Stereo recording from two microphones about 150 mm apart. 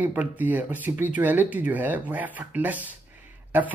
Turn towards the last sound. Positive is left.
turn(degrees=-10)  # may be behind; listen again after turning